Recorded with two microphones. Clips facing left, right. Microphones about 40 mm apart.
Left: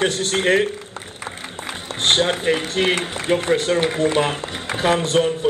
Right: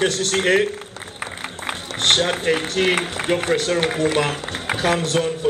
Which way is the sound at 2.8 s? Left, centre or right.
Centre.